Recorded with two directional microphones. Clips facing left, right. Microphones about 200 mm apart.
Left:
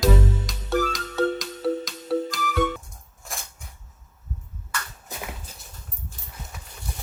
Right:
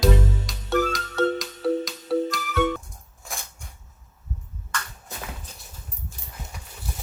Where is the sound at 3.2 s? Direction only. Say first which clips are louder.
Even; centre (ahead or behind).